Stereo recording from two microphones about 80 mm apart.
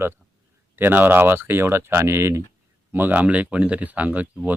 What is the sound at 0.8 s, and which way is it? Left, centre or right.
Speech, right.